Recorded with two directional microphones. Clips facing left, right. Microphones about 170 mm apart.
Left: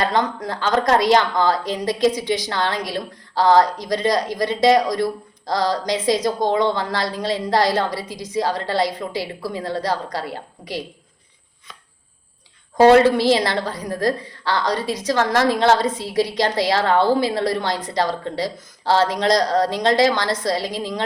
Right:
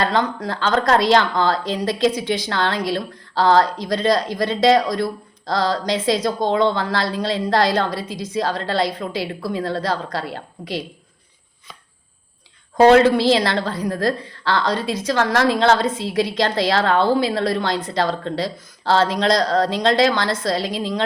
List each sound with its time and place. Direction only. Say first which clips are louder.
0.0 s a woman's voice: right 1 dB; 20° left (ahead or behind)
13.1 s a woman's voice: right 1 dB; 15° left (ahead or behind)
15.2 s a woman's voice: even; 45° left (ahead or behind)
16.0 s a woman's voice: even; 15° left (ahead or behind)